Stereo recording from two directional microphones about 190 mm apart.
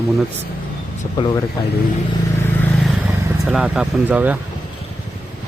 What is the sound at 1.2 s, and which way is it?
Speech, 20° left (ahead or behind).